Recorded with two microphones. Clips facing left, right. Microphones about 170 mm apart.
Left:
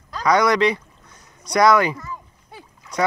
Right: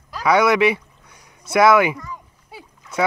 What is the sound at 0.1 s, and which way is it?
Speech, 5° right (ahead or behind).